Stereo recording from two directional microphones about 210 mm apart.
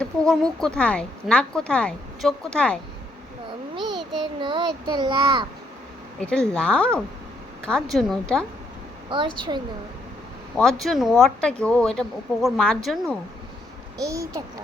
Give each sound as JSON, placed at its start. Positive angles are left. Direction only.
{"t": 0.0, "sound": "a woman's voice", "side_deg": 5}
{"t": 4.2, "sound": "a child's voice", "side_deg": -20}
{"t": 6.1, "sound": "a woman's voice", "side_deg": 5}
{"t": 9.0, "sound": "a child's voice", "side_deg": -25}
{"t": 10.6, "sound": "a woman's voice", "side_deg": 0}
{"t": 14.0, "sound": "a child's voice", "side_deg": -15}